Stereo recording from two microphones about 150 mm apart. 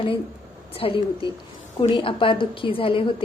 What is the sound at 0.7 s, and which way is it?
A woman's voice, 40° left (ahead or behind).